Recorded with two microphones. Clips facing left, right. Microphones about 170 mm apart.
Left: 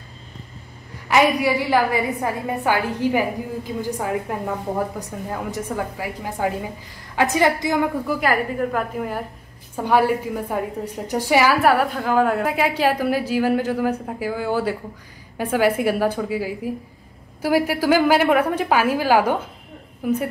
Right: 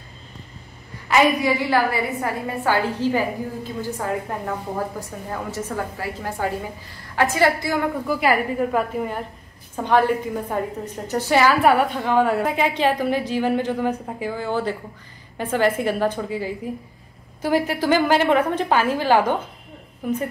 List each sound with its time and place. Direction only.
1.0 s a woman's voice: 15° left (ahead or behind)
8.1 s a woman's voice: 5° right (ahead or behind); by 11.5 s 10° left (ahead or behind)
11.6 s a woman's voice: centre (ahead or behind)